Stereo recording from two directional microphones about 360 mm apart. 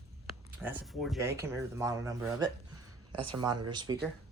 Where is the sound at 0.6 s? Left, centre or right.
Centre.